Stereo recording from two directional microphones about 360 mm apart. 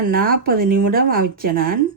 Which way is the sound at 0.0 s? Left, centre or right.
Right.